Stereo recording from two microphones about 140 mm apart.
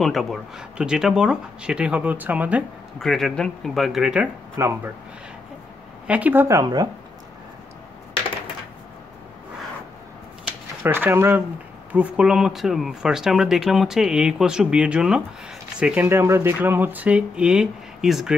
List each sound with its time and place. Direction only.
0.0 s speech: centre (ahead or behind)
3.0 s speech: centre (ahead or behind)
4.6 s speech: 20° right (ahead or behind)
6.0 s speech: 10° right (ahead or behind); by 6.9 s 25° right (ahead or behind)
10.4 s a sound: 15° right (ahead or behind)
11.9 s speech: 10° right (ahead or behind)